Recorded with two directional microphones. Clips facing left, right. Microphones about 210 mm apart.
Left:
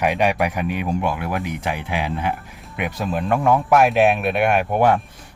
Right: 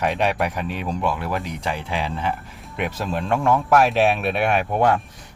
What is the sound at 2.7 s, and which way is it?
Speech, 5° left (ahead or behind).